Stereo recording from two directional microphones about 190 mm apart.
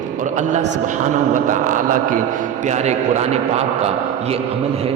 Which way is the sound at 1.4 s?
45° right (ahead or behind).